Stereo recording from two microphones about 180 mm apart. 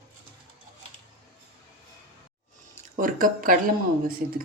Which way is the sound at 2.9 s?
50° right (ahead or behind).